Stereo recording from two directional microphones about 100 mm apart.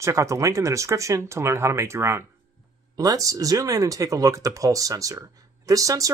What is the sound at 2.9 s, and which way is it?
Speech, 40° right (ahead or behind).